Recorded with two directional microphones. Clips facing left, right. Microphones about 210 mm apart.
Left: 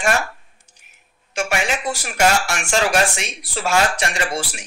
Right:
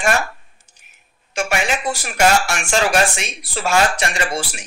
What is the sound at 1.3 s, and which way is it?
Speech, 55° right (ahead or behind).